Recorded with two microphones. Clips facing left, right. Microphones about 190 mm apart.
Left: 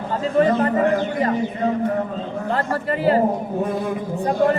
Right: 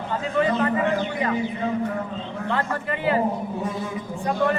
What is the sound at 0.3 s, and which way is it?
A man's voice, 40° left (ahead or behind).